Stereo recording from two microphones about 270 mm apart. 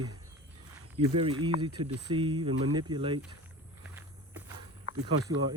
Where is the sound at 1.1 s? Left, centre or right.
Centre.